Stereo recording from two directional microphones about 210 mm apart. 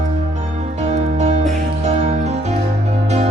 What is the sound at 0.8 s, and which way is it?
Music, 30° right (ahead or behind).